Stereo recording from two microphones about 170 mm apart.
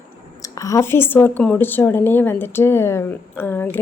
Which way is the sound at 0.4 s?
20° left (ahead or behind).